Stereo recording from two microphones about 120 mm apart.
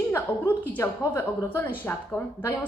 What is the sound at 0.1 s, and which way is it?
A woman's voice, 15° left (ahead or behind).